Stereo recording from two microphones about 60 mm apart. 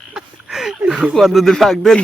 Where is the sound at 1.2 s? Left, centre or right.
Centre.